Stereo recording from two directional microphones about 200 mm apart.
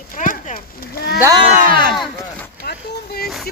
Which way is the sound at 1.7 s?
45° right (ahead or behind).